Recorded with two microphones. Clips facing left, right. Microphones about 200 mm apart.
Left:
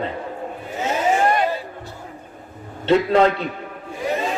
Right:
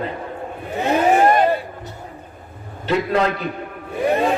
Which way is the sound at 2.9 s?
30° left (ahead or behind).